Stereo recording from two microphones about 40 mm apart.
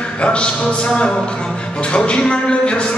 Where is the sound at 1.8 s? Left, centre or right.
Left.